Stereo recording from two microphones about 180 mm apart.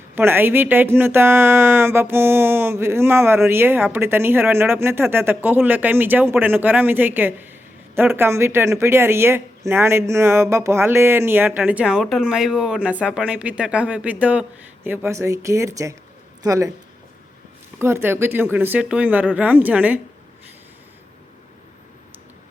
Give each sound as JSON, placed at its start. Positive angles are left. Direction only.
{"t": 0.2, "sound": "speech", "side_deg": -10}
{"t": 17.7, "sound": "speech", "side_deg": -15}